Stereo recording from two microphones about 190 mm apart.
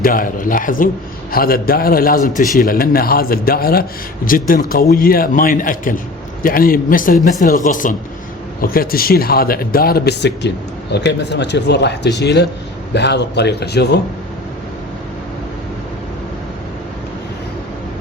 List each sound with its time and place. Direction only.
0.0 s a man's voice: 45° left (ahead or behind)